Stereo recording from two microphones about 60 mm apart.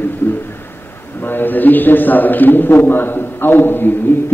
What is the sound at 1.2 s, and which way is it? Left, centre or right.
A man's voice, left.